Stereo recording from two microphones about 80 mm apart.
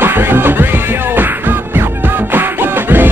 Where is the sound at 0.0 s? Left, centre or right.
Right.